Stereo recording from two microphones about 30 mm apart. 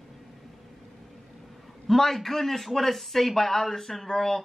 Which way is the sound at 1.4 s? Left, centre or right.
Centre.